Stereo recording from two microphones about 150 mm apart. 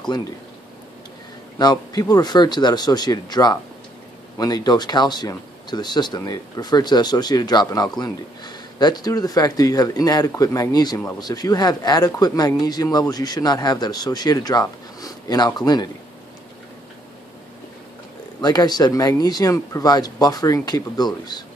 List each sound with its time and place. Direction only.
1.6 s speech: 25° left (ahead or behind)
18.4 s speech: 25° left (ahead or behind)